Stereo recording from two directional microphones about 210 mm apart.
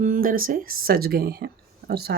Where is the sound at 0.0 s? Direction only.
40° right (ahead or behind).